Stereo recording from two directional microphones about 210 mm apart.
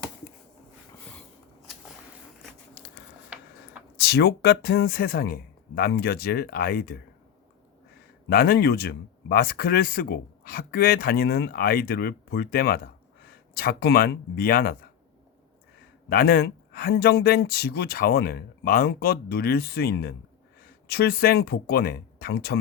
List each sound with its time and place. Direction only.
3.3 s tick-tock: 5° right (ahead or behind)
3.9 s speech: 50° left (ahead or behind)
8.3 s speech: 45° left (ahead or behind)
16.0 s speech: 45° left (ahead or behind)